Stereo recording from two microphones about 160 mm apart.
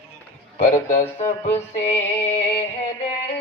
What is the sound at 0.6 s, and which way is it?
Speech, 55° left (ahead or behind).